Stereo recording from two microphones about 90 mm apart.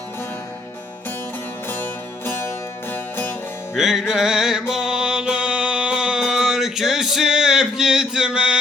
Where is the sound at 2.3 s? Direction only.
25° left (ahead or behind).